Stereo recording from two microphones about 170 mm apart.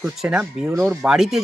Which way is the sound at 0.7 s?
15° right (ahead or behind).